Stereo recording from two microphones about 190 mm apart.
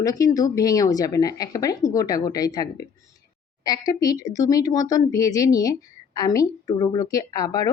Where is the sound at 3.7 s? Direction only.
20° left (ahead or behind).